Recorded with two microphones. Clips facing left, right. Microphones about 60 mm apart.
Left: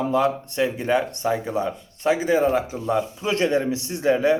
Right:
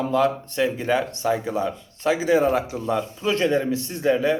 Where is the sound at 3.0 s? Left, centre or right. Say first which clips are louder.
Right 1 dB; centre.